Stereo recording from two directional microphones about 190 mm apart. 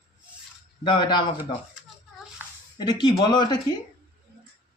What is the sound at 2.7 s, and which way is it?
Speech, 20° left (ahead or behind).